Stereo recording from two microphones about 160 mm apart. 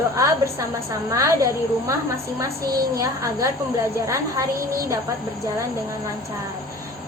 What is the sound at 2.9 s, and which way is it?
A woman's voice, 20° right (ahead or behind).